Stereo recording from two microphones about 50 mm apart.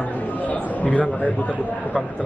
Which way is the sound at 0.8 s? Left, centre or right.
Left.